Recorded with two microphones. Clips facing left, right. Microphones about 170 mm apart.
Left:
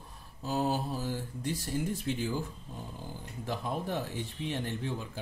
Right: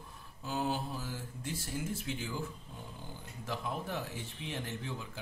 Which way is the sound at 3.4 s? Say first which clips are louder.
Left 4 dB; 35° left (ahead or behind).